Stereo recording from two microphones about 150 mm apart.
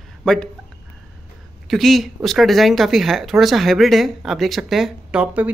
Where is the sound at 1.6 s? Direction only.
Centre (ahead or behind).